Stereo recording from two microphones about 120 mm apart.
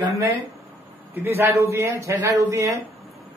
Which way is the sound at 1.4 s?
20° right (ahead or behind).